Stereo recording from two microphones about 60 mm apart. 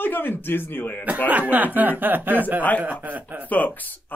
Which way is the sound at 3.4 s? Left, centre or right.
Left.